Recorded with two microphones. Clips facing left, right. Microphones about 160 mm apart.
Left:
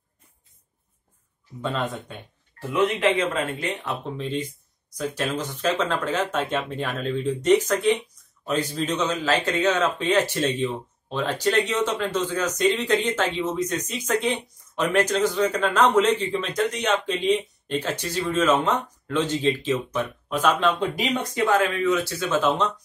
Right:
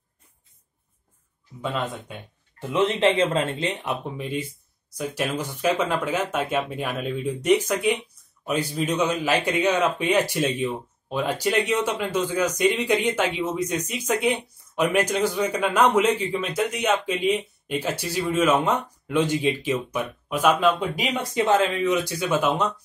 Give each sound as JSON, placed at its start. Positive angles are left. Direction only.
{"t": 2.7, "sound": "a man's voice", "side_deg": -25}
{"t": 21.3, "sound": "a man's voice", "side_deg": -20}